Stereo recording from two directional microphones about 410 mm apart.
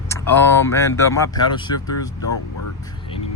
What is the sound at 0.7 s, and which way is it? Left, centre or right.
Speech, centre.